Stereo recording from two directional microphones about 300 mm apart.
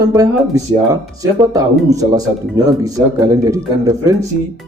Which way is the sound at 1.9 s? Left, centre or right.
Centre.